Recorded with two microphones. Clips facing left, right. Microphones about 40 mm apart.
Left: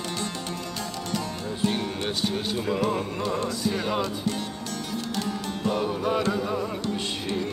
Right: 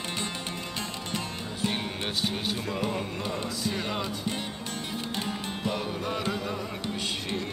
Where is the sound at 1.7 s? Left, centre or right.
Centre.